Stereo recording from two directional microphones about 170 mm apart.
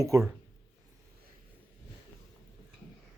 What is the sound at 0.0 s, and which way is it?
Speech, 15° right (ahead or behind).